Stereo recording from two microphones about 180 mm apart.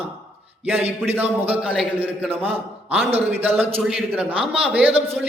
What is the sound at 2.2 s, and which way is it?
Speech, 35° right (ahead or behind).